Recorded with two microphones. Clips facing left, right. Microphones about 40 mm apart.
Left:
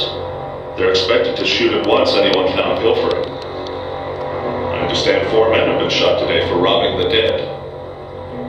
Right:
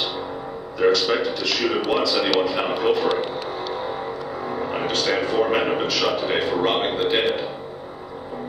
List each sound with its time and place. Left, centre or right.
0.7 s speech: left
4.4 s speech: left